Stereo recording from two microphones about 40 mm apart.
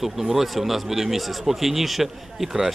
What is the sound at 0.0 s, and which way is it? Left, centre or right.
A man's voice, centre.